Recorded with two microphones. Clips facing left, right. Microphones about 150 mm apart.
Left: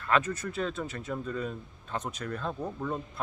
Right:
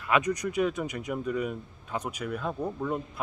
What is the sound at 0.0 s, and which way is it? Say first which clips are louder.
Speech: right 2 dB; 15° right (ahead or behind).